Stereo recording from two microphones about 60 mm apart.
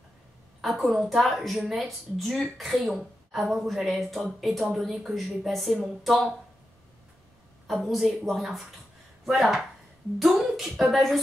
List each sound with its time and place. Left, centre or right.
0.6 s a woman's voice: centre
7.6 s a woman's voice: centre